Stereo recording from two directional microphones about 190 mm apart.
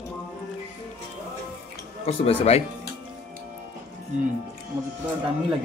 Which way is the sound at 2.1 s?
35° left (ahead or behind).